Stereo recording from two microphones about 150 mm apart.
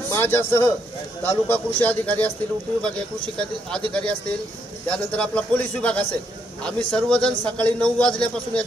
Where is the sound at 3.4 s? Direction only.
5° left (ahead or behind).